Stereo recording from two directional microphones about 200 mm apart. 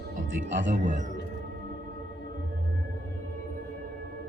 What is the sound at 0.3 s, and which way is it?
Speech, 65° right (ahead or behind).